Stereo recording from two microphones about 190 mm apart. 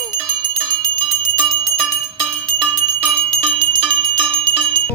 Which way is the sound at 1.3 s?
5° right (ahead or behind).